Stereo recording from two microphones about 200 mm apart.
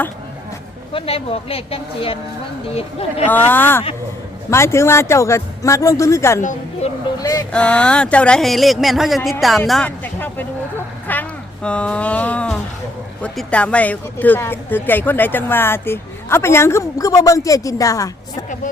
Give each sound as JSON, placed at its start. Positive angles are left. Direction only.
{"t": 0.9, "sound": "a woman's voice", "side_deg": 30}
{"t": 3.2, "sound": "speech", "side_deg": 10}
{"t": 6.4, "sound": "speech", "side_deg": 40}
{"t": 7.2, "sound": "a woman's voice", "side_deg": 20}
{"t": 7.5, "sound": "speech", "side_deg": 5}